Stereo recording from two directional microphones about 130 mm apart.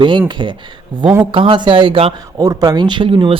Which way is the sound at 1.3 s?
40° right (ahead or behind).